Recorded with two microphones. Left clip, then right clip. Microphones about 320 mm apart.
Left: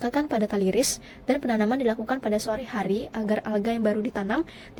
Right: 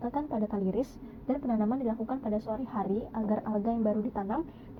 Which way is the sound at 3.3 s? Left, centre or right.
Left.